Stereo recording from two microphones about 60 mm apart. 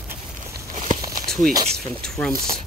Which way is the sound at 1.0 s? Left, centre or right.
Right.